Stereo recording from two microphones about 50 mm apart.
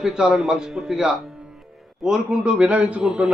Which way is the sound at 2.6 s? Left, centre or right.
Right.